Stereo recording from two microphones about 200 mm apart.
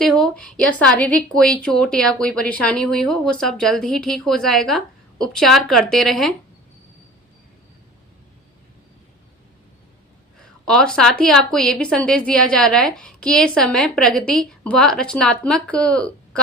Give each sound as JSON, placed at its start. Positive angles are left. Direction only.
{"t": 0.0, "sound": "a woman's voice", "side_deg": 0}
{"t": 10.7, "sound": "a woman's voice", "side_deg": 5}